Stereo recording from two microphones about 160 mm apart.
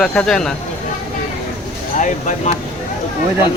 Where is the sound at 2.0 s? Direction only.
50° left (ahead or behind).